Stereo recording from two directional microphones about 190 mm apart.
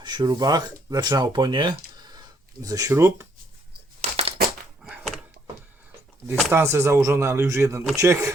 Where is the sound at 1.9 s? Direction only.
20° right (ahead or behind).